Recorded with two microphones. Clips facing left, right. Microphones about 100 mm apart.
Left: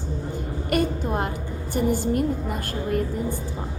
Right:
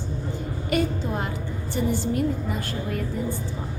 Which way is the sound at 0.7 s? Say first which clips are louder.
Left 2 dB; 50° left (ahead or behind).